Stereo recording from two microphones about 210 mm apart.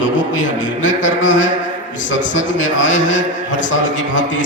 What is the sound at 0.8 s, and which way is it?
Music, 65° left (ahead or behind).